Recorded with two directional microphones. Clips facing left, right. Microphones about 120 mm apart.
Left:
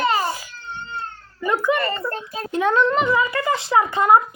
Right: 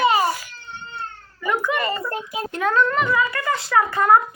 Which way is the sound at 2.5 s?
25° left (ahead or behind).